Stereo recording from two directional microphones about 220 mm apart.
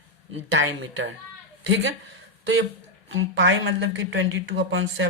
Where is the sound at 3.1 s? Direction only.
55° right (ahead or behind).